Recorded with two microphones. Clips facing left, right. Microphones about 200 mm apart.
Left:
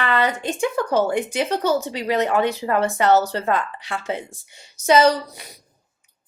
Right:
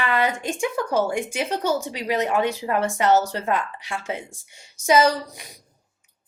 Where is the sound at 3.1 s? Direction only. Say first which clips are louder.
Left 2 dB; 35° left (ahead or behind).